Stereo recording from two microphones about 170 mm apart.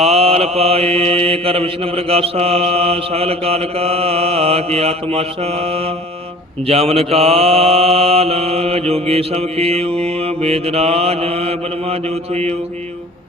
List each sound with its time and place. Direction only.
0.0 s mantra: 35° right (ahead or behind)